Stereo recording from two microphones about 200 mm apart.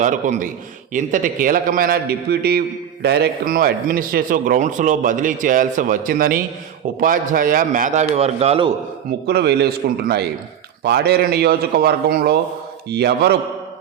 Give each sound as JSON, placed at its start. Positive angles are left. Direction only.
{"t": 0.0, "sound": "a man's voice", "side_deg": -40}
{"t": 9.2, "sound": "a man's voice", "side_deg": -55}